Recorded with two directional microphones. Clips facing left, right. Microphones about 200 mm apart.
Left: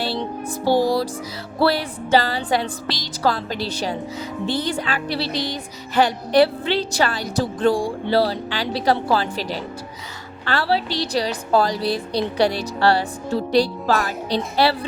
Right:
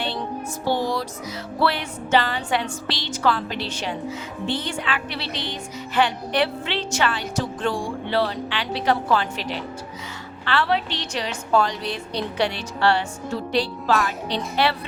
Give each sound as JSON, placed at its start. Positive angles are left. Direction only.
{"t": 0.6, "sound": "music", "side_deg": 35}